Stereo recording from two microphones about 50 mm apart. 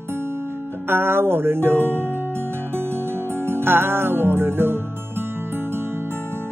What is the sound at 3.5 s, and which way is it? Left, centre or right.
Music, right.